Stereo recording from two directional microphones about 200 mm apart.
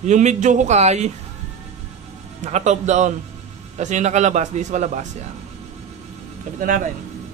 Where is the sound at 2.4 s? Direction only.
35° right (ahead or behind).